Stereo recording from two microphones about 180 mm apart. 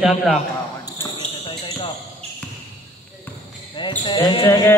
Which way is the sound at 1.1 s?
25° left (ahead or behind).